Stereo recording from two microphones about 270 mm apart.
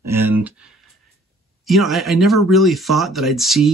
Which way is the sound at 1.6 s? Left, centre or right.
Centre.